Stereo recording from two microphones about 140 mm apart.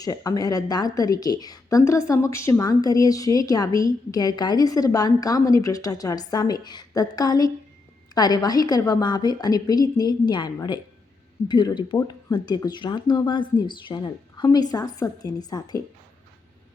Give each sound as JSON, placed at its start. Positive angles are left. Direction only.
{"t": 0.0, "sound": "a woman's voice", "side_deg": 25}